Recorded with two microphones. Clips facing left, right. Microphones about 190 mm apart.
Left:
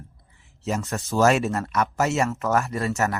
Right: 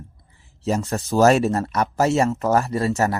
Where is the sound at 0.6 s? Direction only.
35° right (ahead or behind).